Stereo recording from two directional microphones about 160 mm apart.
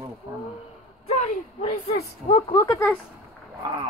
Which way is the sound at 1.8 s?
40° left (ahead or behind).